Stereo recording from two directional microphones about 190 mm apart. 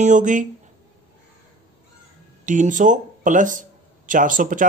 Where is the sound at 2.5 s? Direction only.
40° right (ahead or behind).